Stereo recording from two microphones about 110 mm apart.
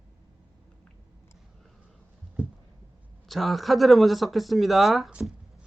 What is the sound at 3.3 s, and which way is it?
Speech, centre (ahead or behind).